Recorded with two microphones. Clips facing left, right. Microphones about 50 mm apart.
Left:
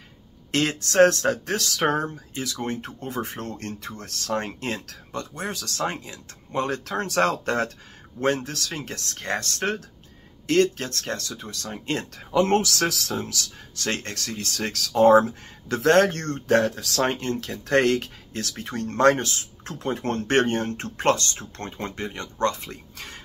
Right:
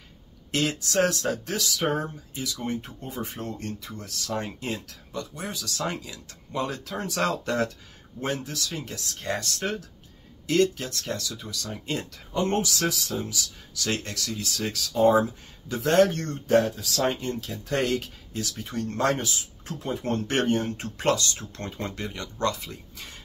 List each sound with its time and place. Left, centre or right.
0.5 s speech: left
5.9 s speech: left
7.2 s speech: left
8.4 s speech: left
11.8 s speech: left
12.3 s speech: left
13.9 s speech: left